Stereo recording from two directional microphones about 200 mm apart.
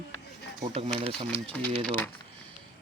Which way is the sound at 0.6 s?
25° right (ahead or behind).